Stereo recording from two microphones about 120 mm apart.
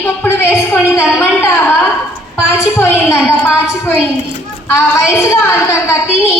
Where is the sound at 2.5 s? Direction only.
20° left (ahead or behind).